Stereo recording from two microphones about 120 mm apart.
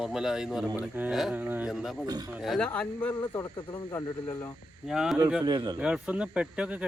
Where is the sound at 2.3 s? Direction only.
Centre (ahead or behind).